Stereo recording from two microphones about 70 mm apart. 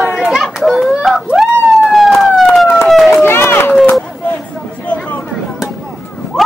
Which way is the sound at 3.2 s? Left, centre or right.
Left.